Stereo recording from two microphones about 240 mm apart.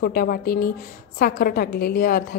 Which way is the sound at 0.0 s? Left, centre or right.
Left.